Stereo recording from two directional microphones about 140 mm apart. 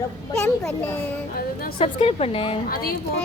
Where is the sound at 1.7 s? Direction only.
45° left (ahead or behind).